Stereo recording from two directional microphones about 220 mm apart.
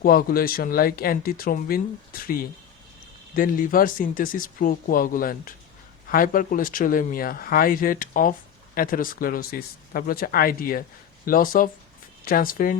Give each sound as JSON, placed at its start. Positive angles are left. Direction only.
{"t": 0.0, "sound": "speech", "side_deg": 40}